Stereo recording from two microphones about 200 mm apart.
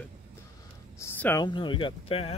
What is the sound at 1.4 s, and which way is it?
Speech, 25° left (ahead or behind).